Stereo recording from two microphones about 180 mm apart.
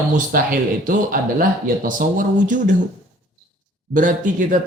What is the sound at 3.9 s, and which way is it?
Speech, 45° right (ahead or behind).